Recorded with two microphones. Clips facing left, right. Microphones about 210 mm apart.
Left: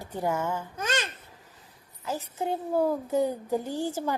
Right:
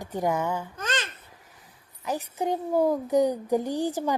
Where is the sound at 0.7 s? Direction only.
10° left (ahead or behind).